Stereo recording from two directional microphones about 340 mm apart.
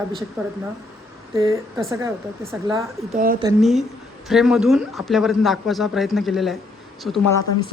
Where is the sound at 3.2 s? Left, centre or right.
Right.